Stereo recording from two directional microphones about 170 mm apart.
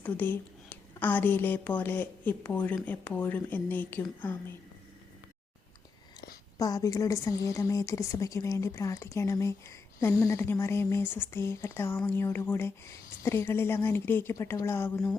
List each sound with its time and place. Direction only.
0.0 s a woman's voice: 10° left (ahead or behind)
6.6 s speech: 20° left (ahead or behind)